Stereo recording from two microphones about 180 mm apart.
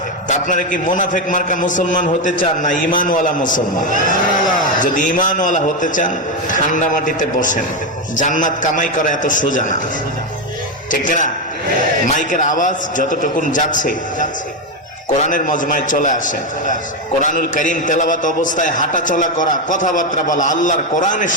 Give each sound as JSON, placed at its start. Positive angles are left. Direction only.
{"t": 0.3, "sound": "a man's voice", "side_deg": 45}
{"t": 11.0, "sound": "a man's voice", "side_deg": 45}